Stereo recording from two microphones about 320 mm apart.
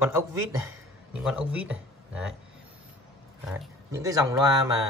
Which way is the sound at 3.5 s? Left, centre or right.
Centre.